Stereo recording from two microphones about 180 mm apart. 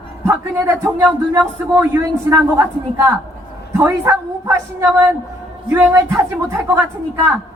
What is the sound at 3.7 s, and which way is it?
Speech, 15° right (ahead or behind).